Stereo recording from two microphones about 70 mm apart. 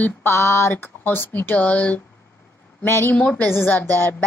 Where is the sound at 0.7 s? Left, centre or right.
Left.